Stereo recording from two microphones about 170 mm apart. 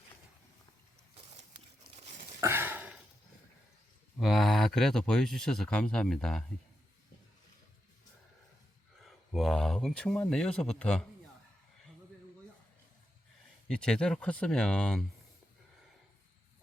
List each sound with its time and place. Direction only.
2.4 s a sound: 15° right (ahead or behind)
4.2 s speech: centre (ahead or behind)
9.0 s speech: centre (ahead or behind)
13.7 s speech: 5° left (ahead or behind)